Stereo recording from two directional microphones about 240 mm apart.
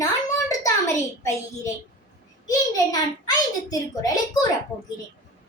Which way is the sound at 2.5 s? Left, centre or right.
Centre.